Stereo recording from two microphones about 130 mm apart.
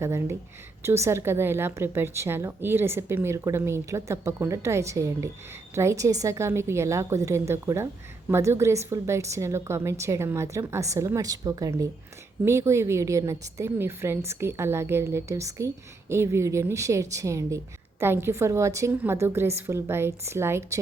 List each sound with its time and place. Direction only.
0.0 s a woman's voice: 20° right (ahead or behind)